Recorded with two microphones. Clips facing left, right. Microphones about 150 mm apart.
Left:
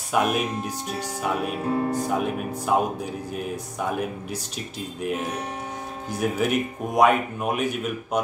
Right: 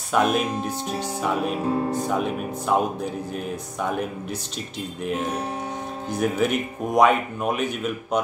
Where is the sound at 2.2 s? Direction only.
10° left (ahead or behind).